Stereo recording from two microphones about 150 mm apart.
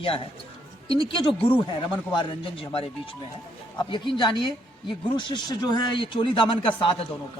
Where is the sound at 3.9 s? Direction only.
30° left (ahead or behind).